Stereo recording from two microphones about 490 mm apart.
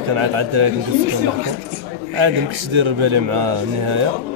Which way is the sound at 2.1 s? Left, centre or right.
Right.